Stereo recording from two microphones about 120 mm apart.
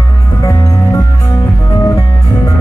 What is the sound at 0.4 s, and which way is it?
Music, 30° left (ahead or behind).